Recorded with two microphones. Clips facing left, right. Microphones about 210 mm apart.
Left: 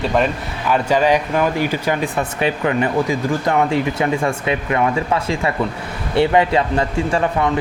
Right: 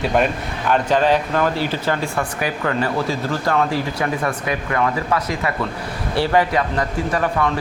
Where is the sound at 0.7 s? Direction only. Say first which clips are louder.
Left 1 dB; 10° left (ahead or behind).